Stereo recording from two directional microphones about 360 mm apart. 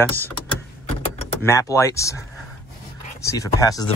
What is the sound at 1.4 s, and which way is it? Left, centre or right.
Speech, centre.